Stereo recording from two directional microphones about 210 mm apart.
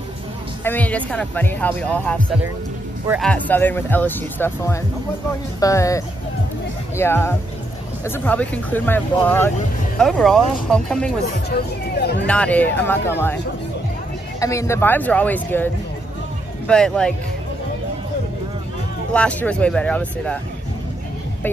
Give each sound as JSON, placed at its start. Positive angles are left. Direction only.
{"t": 0.7, "sound": "speech", "side_deg": 5}
{"t": 11.5, "sound": "speech", "side_deg": 50}
{"t": 12.3, "sound": "speech", "side_deg": 5}
{"t": 14.4, "sound": "speech", "side_deg": 15}
{"t": 19.1, "sound": "speech", "side_deg": 5}